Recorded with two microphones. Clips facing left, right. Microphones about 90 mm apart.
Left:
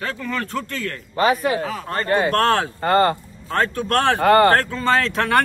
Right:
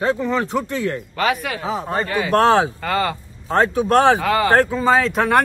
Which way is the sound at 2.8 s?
45° left (ahead or behind).